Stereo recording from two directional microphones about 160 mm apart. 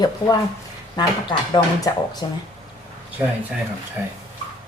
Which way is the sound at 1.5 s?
25° left (ahead or behind).